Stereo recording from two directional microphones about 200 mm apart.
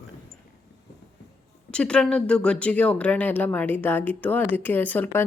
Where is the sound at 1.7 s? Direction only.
5° left (ahead or behind).